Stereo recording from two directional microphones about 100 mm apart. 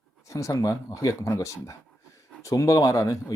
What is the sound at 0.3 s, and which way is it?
Speech, 30° left (ahead or behind).